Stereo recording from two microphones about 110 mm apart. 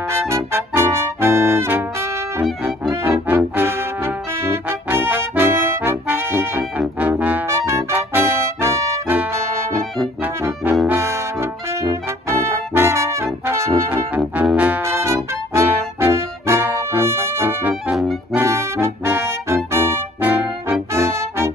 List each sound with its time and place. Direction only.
0.1 s brass instrument: 25° right (ahead or behind)
3.0 s trombone: 20° right (ahead or behind)
6.8 s trombone: 15° right (ahead or behind)
7.4 s music: 25° right (ahead or behind)
9.1 s brass instrument: 15° right (ahead or behind)
10.4 s brass instrument: 25° right (ahead or behind)
14.8 s music: 25° right (ahead or behind)